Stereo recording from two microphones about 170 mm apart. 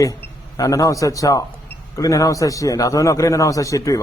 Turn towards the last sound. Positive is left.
turn(degrees=20)  # may be behind; listen again after turning